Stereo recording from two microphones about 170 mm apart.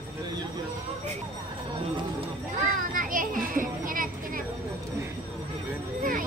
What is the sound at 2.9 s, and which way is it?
Children playing, 50° right (ahead or behind).